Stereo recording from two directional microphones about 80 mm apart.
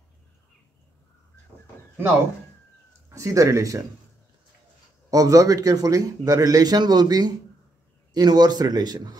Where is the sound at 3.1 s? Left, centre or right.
Right.